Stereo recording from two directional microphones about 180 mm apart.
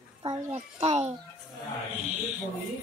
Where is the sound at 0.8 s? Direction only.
35° right (ahead or behind).